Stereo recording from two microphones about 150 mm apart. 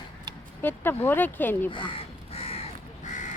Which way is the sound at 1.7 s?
35° left (ahead or behind).